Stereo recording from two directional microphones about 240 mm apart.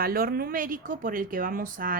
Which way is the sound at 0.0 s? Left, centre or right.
Right.